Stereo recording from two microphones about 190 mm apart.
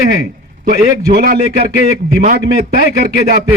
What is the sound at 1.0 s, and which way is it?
Speech, 50° right (ahead or behind).